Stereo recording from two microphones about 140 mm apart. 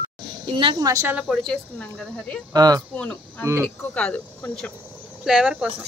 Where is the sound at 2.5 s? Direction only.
25° right (ahead or behind).